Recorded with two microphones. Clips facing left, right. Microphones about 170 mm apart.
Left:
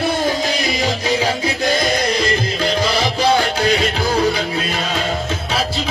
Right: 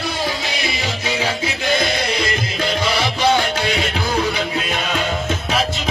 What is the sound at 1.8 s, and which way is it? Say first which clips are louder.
Music: left 3 dB; 40° left (ahead or behind).